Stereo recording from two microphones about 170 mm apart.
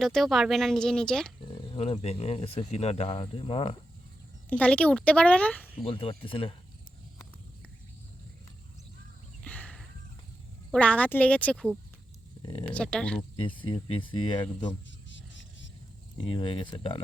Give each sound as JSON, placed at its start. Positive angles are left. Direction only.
{"t": 0.0, "sound": "speech", "side_deg": 0}
{"t": 1.7, "sound": "speech", "side_deg": 35}
{"t": 4.4, "sound": "a woman's voice", "side_deg": 5}
{"t": 5.8, "sound": "speech", "side_deg": 30}
{"t": 9.4, "sound": "a sound", "side_deg": 5}
{"t": 10.7, "sound": "a woman's voice", "side_deg": 5}
{"t": 12.4, "sound": "speech", "side_deg": 25}
{"t": 12.6, "sound": "speech", "side_deg": 5}
{"t": 13.3, "sound": "speech", "side_deg": 30}
{"t": 15.1, "sound": "a sound", "side_deg": 90}
{"t": 16.2, "sound": "speech", "side_deg": 30}